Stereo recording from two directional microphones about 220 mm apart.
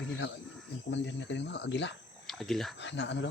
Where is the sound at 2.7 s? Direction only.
50° left (ahead or behind).